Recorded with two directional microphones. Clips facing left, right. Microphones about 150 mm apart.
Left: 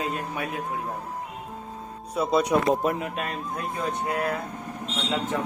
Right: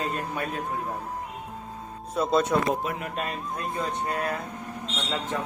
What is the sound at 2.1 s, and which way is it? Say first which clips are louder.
Speech: left 1 dB; 10° left (ahead or behind).